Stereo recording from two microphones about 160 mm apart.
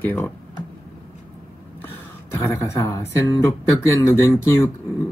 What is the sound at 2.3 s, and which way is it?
Speech, 15° left (ahead or behind).